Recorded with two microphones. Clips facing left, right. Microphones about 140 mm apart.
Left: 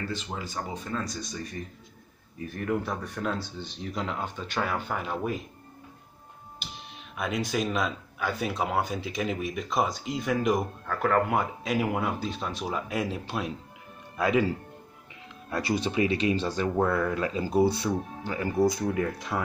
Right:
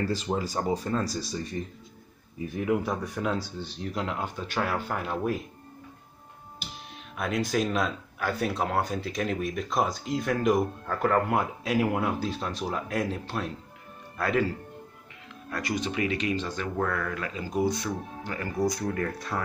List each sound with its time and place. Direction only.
0.0 s speech: 35° right (ahead or behind)
2.3 s speech: 10° right (ahead or behind)
7.2 s speech: centre (ahead or behind)
15.5 s speech: 30° left (ahead or behind)
17.8 s speech: 15° left (ahead or behind)
18.9 s speech: 10° left (ahead or behind)